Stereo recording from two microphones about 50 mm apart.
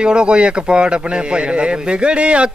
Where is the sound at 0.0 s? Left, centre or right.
Centre.